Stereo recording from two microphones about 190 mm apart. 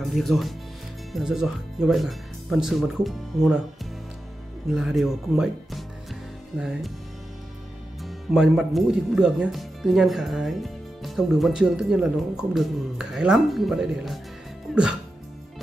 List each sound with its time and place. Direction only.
0.0 s speech: centre (ahead or behind)
4.7 s speech: centre (ahead or behind)
8.0 s speech: 5° right (ahead or behind)